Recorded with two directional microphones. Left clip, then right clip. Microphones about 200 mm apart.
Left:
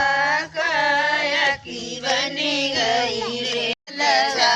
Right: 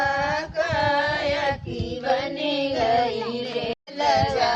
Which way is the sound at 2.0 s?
40° right (ahead or behind).